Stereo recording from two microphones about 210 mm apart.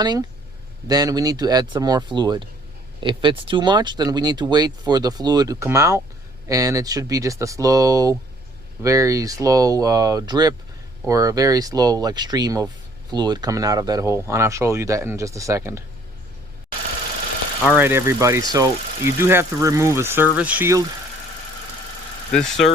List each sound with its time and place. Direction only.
0.0 s speech: 20° right (ahead or behind)
17.6 s speech: 5° right (ahead or behind)
22.3 s speech: 5° left (ahead or behind)